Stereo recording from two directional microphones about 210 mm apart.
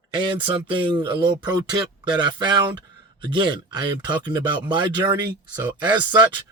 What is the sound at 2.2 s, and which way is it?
Speech, 20° right (ahead or behind).